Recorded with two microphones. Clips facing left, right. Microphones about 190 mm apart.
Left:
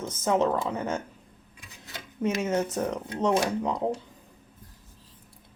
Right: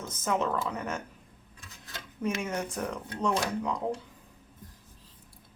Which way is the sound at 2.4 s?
25° left (ahead or behind).